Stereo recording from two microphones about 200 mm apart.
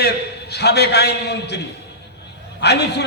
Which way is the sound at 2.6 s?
55° left (ahead or behind).